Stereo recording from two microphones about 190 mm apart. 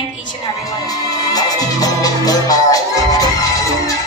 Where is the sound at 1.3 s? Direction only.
20° left (ahead or behind).